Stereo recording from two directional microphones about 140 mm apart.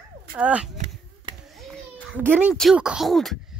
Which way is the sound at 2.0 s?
10° right (ahead or behind).